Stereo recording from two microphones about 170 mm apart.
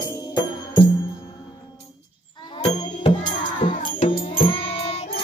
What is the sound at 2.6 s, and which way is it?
Music, 40° left (ahead or behind).